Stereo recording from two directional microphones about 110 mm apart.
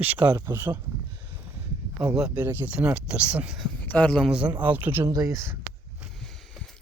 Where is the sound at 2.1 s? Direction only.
10° right (ahead or behind).